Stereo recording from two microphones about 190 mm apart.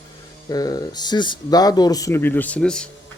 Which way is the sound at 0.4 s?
20° left (ahead or behind).